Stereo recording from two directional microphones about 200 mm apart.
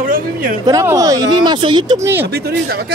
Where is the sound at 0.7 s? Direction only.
15° right (ahead or behind).